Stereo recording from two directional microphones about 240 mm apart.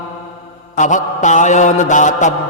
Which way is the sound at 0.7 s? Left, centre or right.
Left.